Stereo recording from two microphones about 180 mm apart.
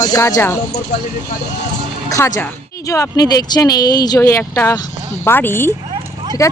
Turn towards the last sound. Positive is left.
turn(degrees=15)  # may be behind; listen again after turning